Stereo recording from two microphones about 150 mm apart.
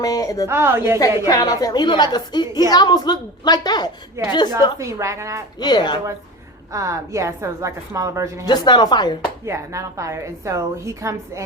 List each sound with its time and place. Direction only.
0.0 s a woman's voice: 25° left (ahead or behind)
0.4 s a woman's voice: 15° right (ahead or behind)
0.9 s a woman's voice: 25° left (ahead or behind)
4.2 s a woman's voice: 15° right (ahead or behind)
5.5 s a woman's voice: 30° left (ahead or behind)
6.7 s a woman's voice: 20° right (ahead or behind)
8.4 s a woman's voice: 30° left (ahead or behind)
9.5 s a woman's voice: 20° right (ahead or behind)